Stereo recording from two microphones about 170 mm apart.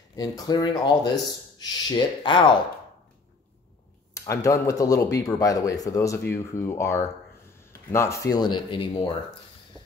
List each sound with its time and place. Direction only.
0.1 s speech: 20° left (ahead or behind)
4.1 s speech: 20° left (ahead or behind)